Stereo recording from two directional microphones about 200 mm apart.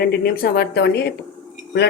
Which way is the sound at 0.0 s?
50° left (ahead or behind).